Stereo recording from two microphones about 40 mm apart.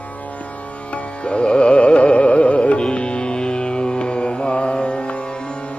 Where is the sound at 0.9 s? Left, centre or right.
Left.